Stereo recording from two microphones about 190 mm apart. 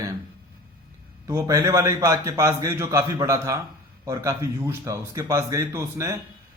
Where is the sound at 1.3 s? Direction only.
15° right (ahead or behind).